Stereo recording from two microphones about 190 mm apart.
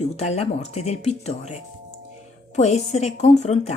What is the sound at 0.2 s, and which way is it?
A woman's voice, 35° left (ahead or behind).